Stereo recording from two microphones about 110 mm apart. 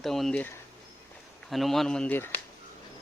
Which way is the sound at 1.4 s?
Centre (ahead or behind).